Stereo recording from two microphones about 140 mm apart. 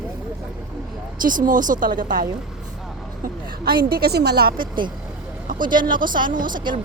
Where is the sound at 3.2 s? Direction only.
90° right.